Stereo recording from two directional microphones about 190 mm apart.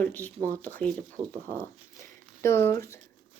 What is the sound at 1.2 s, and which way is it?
Speech, 20° right (ahead or behind).